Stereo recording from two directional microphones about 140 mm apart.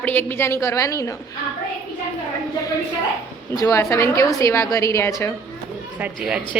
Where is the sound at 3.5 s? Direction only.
20° left (ahead or behind).